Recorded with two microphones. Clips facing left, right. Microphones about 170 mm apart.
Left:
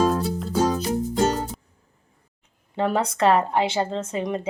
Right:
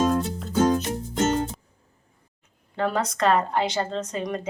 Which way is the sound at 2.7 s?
25° left (ahead or behind).